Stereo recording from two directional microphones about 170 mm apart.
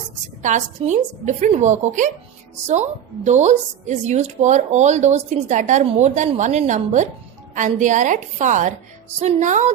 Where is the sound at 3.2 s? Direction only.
45° right (ahead or behind).